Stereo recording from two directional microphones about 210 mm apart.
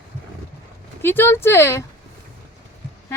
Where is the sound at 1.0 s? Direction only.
10° left (ahead or behind).